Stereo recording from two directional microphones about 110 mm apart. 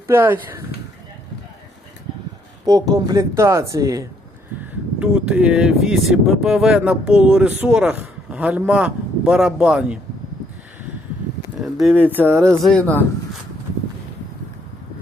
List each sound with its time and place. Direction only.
0.1 s speech: 20° right (ahead or behind)
2.6 s speech: 35° right (ahead or behind)
4.9 s speech: 10° right (ahead or behind)
11.6 s speech: centre (ahead or behind)
12.1 s speech: 20° right (ahead or behind)
12.6 s speech: 10° left (ahead or behind)